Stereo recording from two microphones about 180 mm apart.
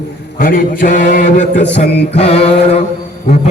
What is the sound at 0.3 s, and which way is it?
A man's voice, 50° left (ahead or behind).